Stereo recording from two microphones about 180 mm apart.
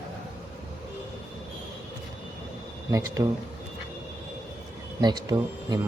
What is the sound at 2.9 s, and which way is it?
Speech, 20° right (ahead or behind).